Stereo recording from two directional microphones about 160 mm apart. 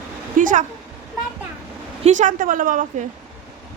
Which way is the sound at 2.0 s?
50° right (ahead or behind).